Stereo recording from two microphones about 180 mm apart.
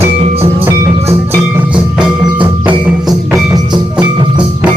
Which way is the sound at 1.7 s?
25° right (ahead or behind).